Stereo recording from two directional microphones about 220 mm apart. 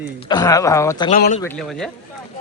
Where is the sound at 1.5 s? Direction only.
Centre (ahead or behind).